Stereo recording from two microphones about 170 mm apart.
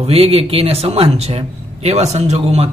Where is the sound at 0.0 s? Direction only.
35° right (ahead or behind).